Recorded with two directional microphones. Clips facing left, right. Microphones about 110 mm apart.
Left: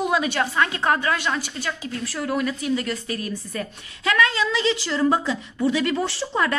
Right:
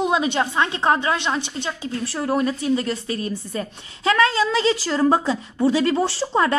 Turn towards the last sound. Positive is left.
turn(degrees=-30)  # may be behind; listen again after turning